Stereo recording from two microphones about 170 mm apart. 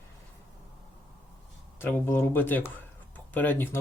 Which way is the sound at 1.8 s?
15° left (ahead or behind).